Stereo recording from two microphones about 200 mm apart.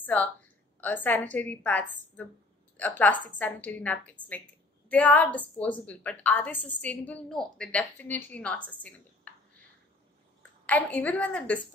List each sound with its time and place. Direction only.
0.0 s a woman's voice: 5° left (ahead or behind)
10.7 s a woman's voice: 5° left (ahead or behind)